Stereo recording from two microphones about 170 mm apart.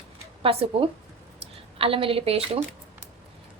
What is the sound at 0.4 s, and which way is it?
Speech, 30° right (ahead or behind).